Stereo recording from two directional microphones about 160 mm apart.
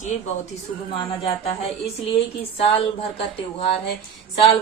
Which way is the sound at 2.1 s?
40° left (ahead or behind).